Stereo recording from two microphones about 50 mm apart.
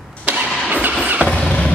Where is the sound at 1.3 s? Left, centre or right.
Centre.